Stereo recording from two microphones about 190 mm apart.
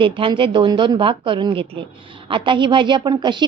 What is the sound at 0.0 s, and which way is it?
A woman's voice, 25° right (ahead or behind).